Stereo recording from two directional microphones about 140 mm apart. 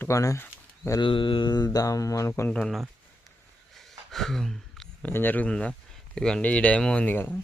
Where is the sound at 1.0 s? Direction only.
35° left (ahead or behind); by 2.5 s 20° left (ahead or behind).